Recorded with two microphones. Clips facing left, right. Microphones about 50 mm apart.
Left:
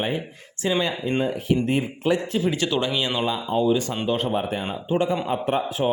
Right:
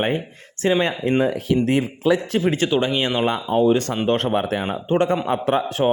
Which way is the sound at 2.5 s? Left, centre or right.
Right.